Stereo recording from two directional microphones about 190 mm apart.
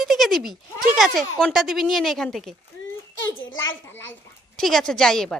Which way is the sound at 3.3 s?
90° left.